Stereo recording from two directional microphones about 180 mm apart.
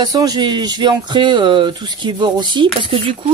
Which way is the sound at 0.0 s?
20° right (ahead or behind).